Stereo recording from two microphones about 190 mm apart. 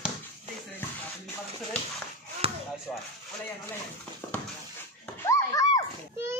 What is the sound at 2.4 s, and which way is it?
Basketball bounce, 30° right (ahead or behind).